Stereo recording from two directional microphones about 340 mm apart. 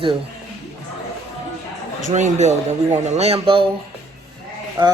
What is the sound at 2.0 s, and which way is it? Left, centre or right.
A man's voice, right.